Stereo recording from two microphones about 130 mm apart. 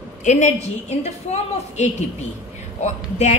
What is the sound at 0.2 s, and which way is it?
A woman's voice, 70° left (ahead or behind).